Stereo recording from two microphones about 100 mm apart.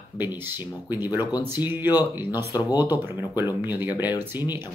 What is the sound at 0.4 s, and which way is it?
Speech, 20° right (ahead or behind).